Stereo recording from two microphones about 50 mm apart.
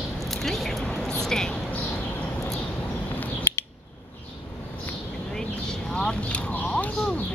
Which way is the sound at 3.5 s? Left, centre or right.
Left.